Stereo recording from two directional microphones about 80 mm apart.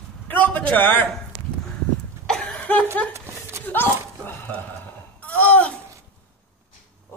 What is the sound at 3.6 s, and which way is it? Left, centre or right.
Dog, left.